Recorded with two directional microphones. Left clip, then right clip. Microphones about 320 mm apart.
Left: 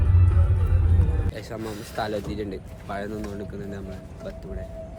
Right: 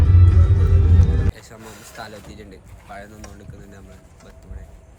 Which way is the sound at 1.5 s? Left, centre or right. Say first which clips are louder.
Left 7 dB; right.